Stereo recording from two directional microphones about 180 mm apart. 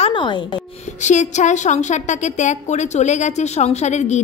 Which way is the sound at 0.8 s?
40° left (ahead or behind).